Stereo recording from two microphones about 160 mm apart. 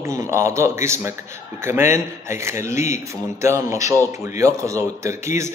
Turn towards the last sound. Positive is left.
turn(degrees=-15)  # may be behind; listen again after turning